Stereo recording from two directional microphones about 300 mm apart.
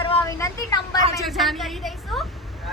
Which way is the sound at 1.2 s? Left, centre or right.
Centre.